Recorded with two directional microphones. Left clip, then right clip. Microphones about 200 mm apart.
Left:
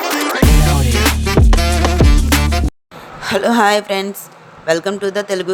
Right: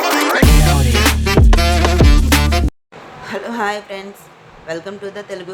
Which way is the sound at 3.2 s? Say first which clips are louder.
Left 8 dB; 45° left (ahead or behind).